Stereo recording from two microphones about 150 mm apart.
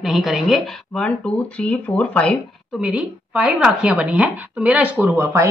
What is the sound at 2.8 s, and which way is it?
Speech, 5° right (ahead or behind).